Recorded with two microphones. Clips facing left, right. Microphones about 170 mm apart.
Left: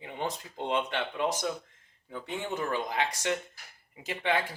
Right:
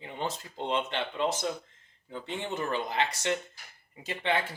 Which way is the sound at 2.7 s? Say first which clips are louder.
Right 1 dB; 10° left (ahead or behind).